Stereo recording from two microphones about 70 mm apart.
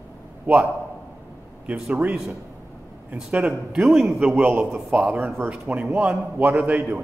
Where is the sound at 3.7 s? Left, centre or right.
Centre.